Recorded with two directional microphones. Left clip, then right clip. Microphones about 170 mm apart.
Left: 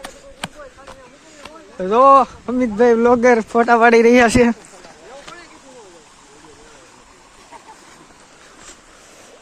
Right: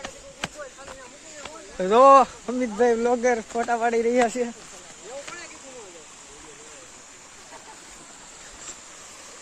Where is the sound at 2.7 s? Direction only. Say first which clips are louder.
Left 8 dB; 30° left (ahead or behind); by 4.5 s 75° left (ahead or behind).